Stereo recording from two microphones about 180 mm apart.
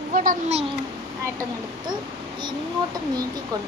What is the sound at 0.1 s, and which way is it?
Speech, 50° right (ahead or behind).